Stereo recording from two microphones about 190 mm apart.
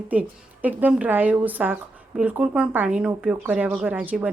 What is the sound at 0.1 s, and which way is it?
Speech, 10° right (ahead or behind).